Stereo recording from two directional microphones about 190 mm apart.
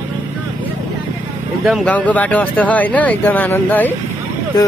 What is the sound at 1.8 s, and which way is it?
Speech, 5° left (ahead or behind).